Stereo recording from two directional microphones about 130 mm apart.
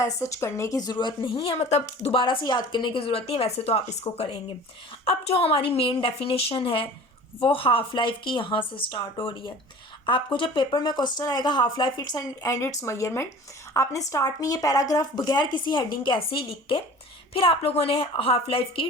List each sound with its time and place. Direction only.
0.0 s speech: 25° left (ahead or behind); by 2.1 s 55° left (ahead or behind)
2.1 s a woman's voice: 40° left (ahead or behind)